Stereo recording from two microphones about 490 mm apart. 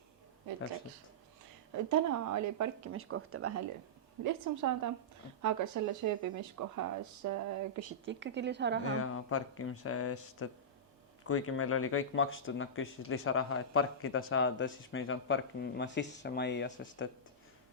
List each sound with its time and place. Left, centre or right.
1.7 s a woman's voice: right
4.2 s speech: right
8.0 s a woman's voice: right
9.0 s speech: left